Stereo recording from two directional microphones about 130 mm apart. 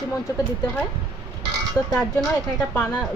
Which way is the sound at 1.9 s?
5° left (ahead or behind).